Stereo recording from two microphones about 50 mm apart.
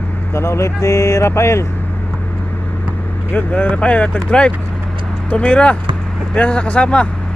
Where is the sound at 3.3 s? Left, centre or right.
Left.